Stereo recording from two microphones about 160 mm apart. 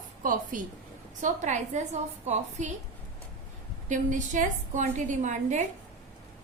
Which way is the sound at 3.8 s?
50° right (ahead or behind).